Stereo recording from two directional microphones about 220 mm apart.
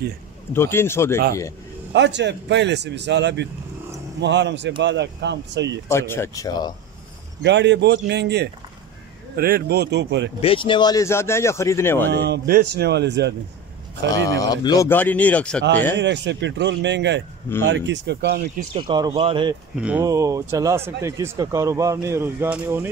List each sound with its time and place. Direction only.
0.5 s speech: 10° left (ahead or behind)
2.0 s speech: 55° right (ahead or behind)
5.9 s speech: 10° left (ahead or behind)
7.4 s speech: 55° right (ahead or behind)
10.4 s speech: 25° left (ahead or behind)
12.1 s speech: 45° right (ahead or behind)
14.4 s speech: 15° left (ahead or behind)
16.0 s speech: 55° right (ahead or behind)
18.7 s a man's voice: 25° right (ahead or behind)